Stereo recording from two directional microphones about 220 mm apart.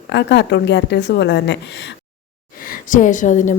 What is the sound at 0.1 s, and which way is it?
A woman's voice, 50° left (ahead or behind).